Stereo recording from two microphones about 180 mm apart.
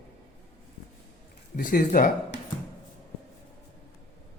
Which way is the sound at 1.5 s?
50° left (ahead or behind).